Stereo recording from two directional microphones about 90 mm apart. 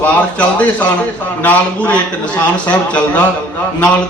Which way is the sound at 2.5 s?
15° left (ahead or behind).